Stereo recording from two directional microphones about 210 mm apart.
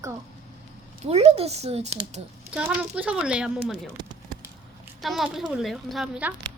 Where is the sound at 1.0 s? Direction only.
30° right (ahead or behind).